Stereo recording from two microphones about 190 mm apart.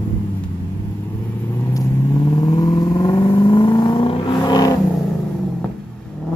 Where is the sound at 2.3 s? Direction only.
20° left (ahead or behind).